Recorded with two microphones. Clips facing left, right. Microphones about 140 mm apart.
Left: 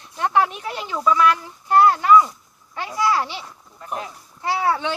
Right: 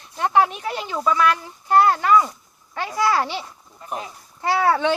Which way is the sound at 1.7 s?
40° right (ahead or behind).